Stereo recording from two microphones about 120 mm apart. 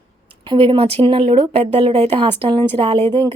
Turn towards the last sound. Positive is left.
turn(degrees=-50)  # may be behind; listen again after turning